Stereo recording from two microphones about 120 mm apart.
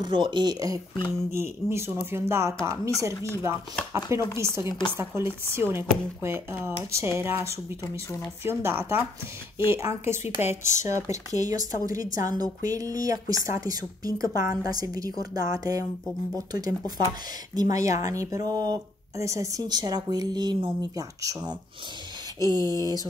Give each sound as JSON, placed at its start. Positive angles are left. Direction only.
{"t": 0.0, "sound": "speech", "side_deg": -40}
{"t": 1.0, "sound": "speech", "side_deg": -20}
{"t": 4.6, "sound": "speech", "side_deg": 40}
{"t": 4.9, "sound": "speech", "side_deg": -20}